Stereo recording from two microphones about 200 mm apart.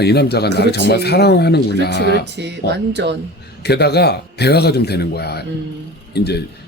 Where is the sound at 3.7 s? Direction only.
55° left (ahead or behind).